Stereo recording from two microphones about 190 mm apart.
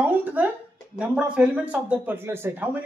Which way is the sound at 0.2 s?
10° right (ahead or behind).